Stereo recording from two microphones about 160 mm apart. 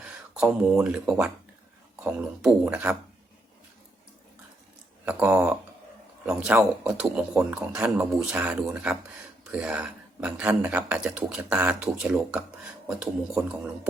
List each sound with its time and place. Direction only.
0.0 s speech: 5° right (ahead or behind)
5.0 s speech: 10° right (ahead or behind)